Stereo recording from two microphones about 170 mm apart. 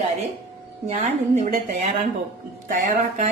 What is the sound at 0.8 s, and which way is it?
A woman's voice, 45° right (ahead or behind).